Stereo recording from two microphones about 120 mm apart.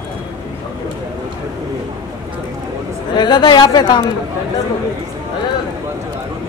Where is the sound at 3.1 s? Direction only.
35° left (ahead or behind).